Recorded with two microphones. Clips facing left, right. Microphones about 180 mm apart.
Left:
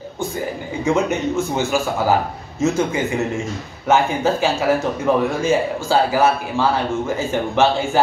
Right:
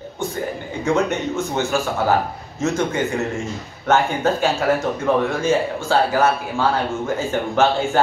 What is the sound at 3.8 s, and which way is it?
A man's voice, 5° left (ahead or behind).